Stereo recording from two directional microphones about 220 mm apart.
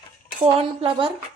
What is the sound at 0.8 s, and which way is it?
Speech, 25° right (ahead or behind).